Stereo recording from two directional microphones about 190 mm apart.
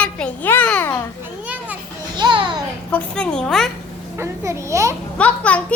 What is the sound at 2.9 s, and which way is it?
Speech, 5° left (ahead or behind).